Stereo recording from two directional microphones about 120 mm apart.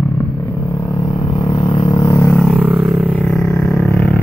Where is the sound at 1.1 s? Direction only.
45° left (ahead or behind).